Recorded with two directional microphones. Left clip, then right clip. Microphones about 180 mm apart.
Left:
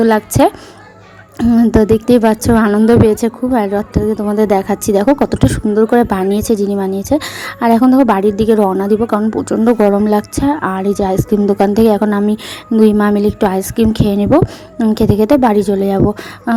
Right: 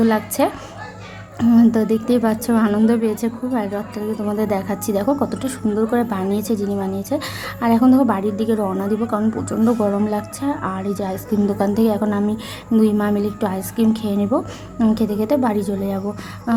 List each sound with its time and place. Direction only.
0.0 s a woman's voice: 40° left (ahead or behind)
1.4 s a woman's voice: 30° left (ahead or behind)
1.7 s a woman's voice: 40° left (ahead or behind)
14.4 s a woman's voice: 30° left (ahead or behind)
14.9 s a woman's voice: 45° left (ahead or behind)